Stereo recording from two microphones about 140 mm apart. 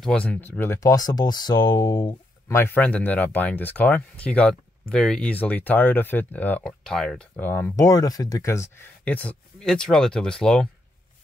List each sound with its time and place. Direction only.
0.0 s speech: 10° left (ahead or behind); by 2.1 s 35° left (ahead or behind)
2.4 s speech: 15° left (ahead or behind)